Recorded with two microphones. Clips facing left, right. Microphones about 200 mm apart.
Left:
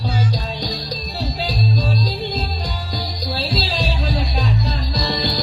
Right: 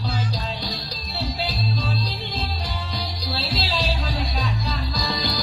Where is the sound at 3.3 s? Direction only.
40° left (ahead or behind).